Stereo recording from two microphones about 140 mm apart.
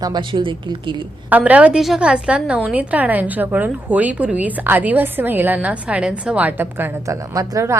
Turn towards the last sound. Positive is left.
turn(degrees=-25)  # may be behind; listen again after turning